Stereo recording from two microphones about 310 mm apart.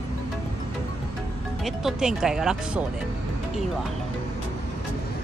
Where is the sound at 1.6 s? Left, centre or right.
Centre.